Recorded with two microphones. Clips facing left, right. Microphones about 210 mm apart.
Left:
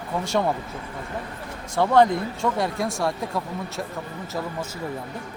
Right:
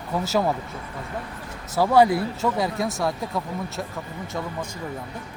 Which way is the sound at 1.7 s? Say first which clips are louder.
Right 1 dB; 5° right (ahead or behind).